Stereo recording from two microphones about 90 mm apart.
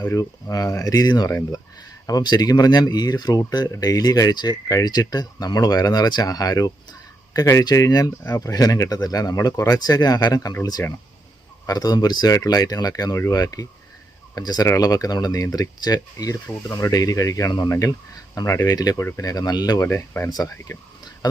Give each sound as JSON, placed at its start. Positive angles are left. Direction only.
{"t": 0.1, "sound": "speech", "side_deg": 40}
{"t": 7.6, "sound": "speech", "side_deg": 45}